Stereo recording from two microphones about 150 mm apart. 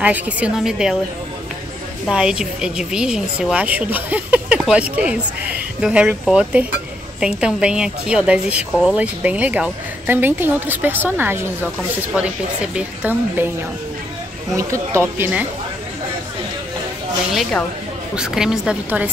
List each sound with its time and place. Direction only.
0.0 s speech: 10° right (ahead or behind)
2.0 s speech: 5° right (ahead or behind)
12.7 s speech: 10° right (ahead or behind)
14.5 s speech: 20° right (ahead or behind)
17.3 s a woman's voice: centre (ahead or behind)